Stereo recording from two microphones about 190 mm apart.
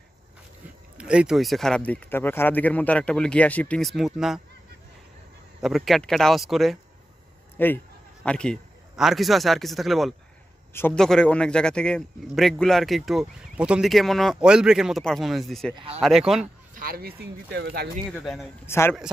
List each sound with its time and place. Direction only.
0.9 s a man's voice: 5° right (ahead or behind)
5.6 s a man's voice: centre (ahead or behind)
7.5 s a man's voice: 10° left (ahead or behind)
15.7 s speech: 30° right (ahead or behind)
16.0 s a man's voice: centre (ahead or behind)
16.7 s speech: 50° right (ahead or behind)
18.1 s a man's voice: centre (ahead or behind)
18.7 s a man's voice: 15° left (ahead or behind)